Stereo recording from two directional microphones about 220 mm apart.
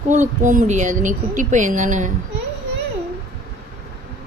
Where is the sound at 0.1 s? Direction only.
35° right (ahead or behind).